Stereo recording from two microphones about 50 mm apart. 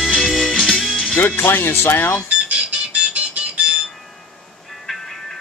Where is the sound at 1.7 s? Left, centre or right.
Left.